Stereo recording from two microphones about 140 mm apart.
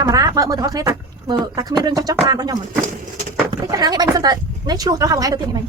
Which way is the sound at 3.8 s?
30° right (ahead or behind).